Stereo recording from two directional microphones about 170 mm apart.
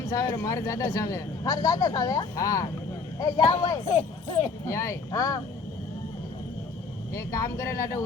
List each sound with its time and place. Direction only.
0.1 s speech: 20° left (ahead or behind)
7.1 s speech: 20° left (ahead or behind)